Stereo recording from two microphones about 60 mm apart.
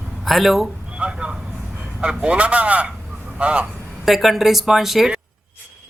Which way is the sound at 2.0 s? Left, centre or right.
Centre.